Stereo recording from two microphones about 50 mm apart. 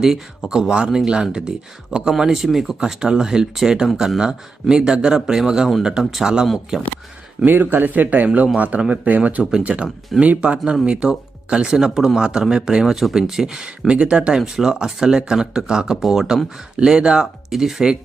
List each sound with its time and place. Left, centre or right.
0.0 s speech: centre
2.1 s speech: centre
7.4 s speech: right
9.4 s speech: centre